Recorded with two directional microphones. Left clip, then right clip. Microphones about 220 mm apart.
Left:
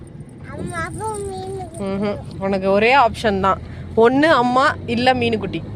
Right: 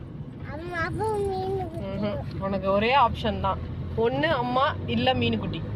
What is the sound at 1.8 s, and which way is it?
Speech, 55° left (ahead or behind).